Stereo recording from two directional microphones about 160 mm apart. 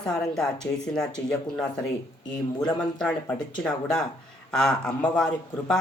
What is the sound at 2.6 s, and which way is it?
Speech, 5° left (ahead or behind).